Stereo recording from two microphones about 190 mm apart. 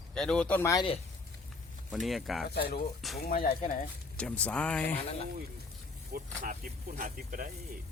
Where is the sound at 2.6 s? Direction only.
55° left (ahead or behind).